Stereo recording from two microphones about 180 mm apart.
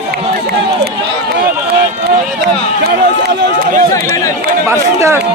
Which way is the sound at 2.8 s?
65° right (ahead or behind).